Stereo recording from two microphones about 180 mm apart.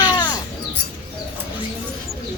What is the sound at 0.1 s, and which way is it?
Bird, 25° left (ahead or behind).